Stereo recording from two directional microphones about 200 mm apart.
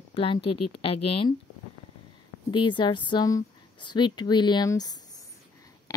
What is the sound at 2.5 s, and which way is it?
Speech, 25° left (ahead or behind).